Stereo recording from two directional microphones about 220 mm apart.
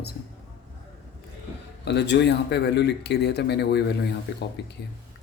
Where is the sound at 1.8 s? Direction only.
50° left (ahead or behind).